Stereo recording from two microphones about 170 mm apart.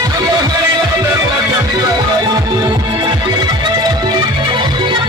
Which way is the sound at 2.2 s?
25° right (ahead or behind).